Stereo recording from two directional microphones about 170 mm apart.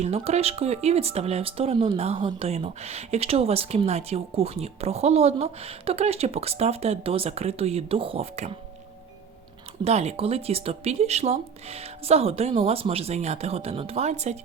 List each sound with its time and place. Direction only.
0.0 s speech: 35° right (ahead or behind)
9.8 s speech: 40° right (ahead or behind)